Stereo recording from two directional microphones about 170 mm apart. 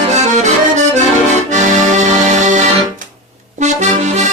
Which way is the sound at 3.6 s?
45° right (ahead or behind).